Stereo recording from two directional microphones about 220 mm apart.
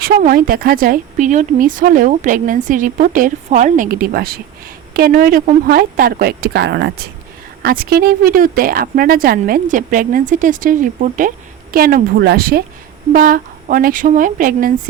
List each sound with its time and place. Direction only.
0.0 s speech: 40° right (ahead or behind)